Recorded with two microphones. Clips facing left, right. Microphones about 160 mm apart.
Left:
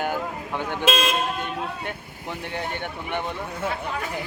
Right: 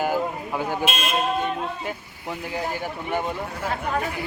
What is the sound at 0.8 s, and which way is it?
Speech, 90° left.